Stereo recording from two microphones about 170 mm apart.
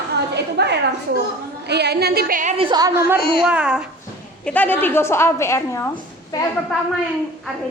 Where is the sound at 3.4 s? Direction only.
5° right (ahead or behind).